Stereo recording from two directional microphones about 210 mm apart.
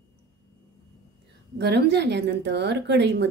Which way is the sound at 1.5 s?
55° right (ahead or behind).